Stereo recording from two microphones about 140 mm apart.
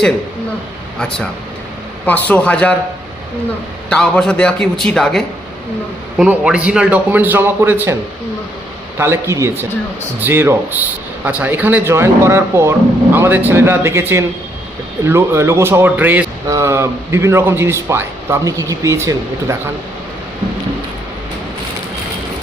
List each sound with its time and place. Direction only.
2.0 s a man's voice: 10° left (ahead or behind)
3.8 s a man's voice: 5° left (ahead or behind)
6.1 s a man's voice: 5° right (ahead or behind)
9.0 s a man's voice: 20° right (ahead or behind)